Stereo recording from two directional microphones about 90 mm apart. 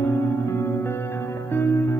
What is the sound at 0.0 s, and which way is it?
Music, 30° left (ahead or behind).